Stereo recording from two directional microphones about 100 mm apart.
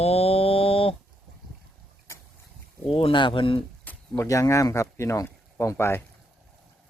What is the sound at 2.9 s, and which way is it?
Speech, 60° left (ahead or behind).